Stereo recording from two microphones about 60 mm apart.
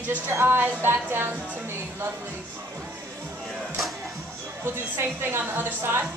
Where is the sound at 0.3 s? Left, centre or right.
Right.